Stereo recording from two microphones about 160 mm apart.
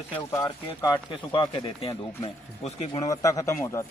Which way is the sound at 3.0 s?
20° left (ahead or behind).